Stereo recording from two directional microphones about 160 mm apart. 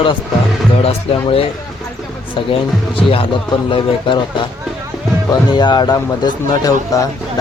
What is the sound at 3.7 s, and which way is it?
Speech, 30° left (ahead or behind).